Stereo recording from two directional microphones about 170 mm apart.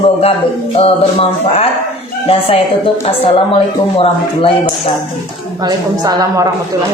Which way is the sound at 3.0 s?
35° left (ahead or behind).